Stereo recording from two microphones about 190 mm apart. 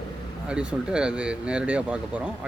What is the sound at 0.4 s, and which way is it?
Speech, 5° right (ahead or behind).